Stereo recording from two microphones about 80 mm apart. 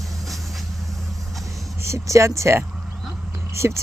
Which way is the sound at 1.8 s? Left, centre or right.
Right.